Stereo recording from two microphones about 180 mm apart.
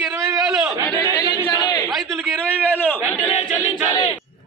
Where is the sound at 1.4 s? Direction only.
20° left (ahead or behind).